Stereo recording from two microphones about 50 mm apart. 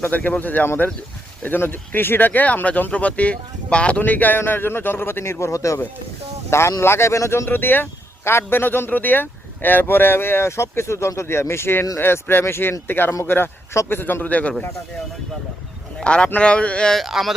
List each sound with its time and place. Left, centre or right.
0.1 s speech: left
4.0 s speech: left
4.4 s speech: left
6.5 s speech: left
6.8 s speech: left
7.4 s speech: left
14.3 s speech: left
16.0 s speech: left
17.1 s speech: centre